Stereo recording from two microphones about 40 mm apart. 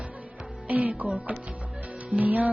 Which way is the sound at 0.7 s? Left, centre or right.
Right.